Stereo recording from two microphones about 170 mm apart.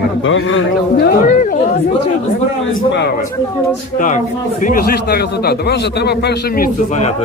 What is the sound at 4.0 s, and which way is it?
Speech, 50° left (ahead or behind).